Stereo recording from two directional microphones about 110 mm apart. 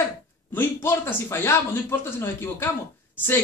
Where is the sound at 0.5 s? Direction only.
20° left (ahead or behind).